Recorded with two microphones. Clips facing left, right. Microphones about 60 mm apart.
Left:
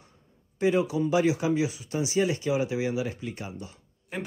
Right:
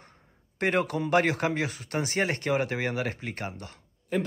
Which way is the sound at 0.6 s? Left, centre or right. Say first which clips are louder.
Left 2 dB; right.